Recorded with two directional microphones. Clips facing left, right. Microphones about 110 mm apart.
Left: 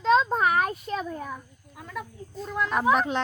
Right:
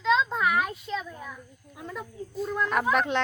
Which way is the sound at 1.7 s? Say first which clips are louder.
Left 1 dB; 20° right (ahead or behind).